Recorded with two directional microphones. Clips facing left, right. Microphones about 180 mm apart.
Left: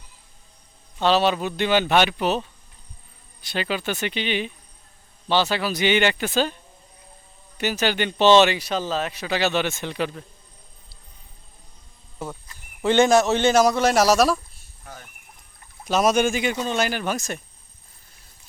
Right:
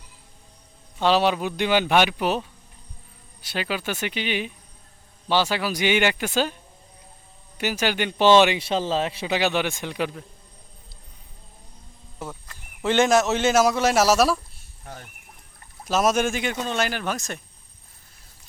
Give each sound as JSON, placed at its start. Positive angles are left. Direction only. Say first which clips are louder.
{"t": 0.9, "sound": "speech", "louder": "even", "side_deg": -10}
{"t": 7.6, "sound": "speech", "louder": "left 1 dB", "side_deg": -10}
{"t": 8.5, "sound": "a man's voice", "louder": "right 2 dB", "side_deg": -25}
{"t": 9.3, "sound": "speech", "louder": "left 1 dB", "side_deg": -15}
{"t": 12.8, "sound": "speech", "louder": "left 2 dB", "side_deg": 0}
{"t": 15.9, "sound": "speech", "louder": "left 2 dB", "side_deg": 0}